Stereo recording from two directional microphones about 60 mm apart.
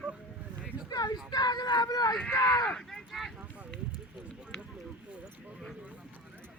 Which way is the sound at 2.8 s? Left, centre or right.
Centre.